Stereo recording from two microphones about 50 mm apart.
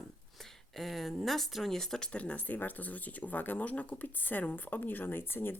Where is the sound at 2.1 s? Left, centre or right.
Left.